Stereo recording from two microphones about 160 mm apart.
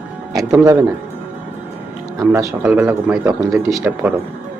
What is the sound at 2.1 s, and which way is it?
Speech, 20° right (ahead or behind).